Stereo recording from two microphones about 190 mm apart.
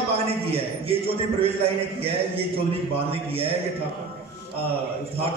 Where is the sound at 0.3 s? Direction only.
30° right (ahead or behind).